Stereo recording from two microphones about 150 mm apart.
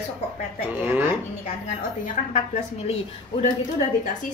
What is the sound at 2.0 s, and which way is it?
Speech, 55° left (ahead or behind).